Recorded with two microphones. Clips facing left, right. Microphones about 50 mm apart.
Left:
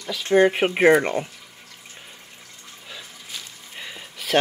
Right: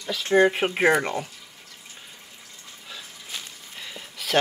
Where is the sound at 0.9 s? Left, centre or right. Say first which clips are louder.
Left 4 dB; left.